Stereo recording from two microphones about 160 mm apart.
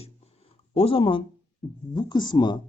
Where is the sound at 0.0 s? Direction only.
35° left (ahead or behind).